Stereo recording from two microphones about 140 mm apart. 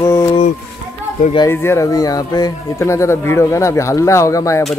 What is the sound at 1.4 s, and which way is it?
Speech, 15° left (ahead or behind).